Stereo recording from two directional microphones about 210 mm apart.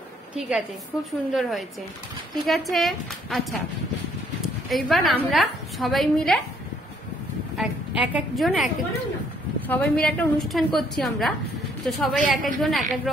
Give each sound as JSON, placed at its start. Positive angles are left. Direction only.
{"t": 0.4, "sound": "a woman's voice", "side_deg": 0}
{"t": 4.6, "sound": "a woman's voice", "side_deg": 0}
{"t": 7.5, "sound": "a woman's voice", "side_deg": 0}
{"t": 12.2, "sound": "a woman's voice", "side_deg": -40}
{"t": 12.6, "sound": "a woman's voice", "side_deg": 0}